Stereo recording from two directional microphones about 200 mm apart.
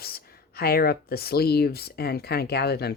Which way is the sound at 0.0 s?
50° left (ahead or behind).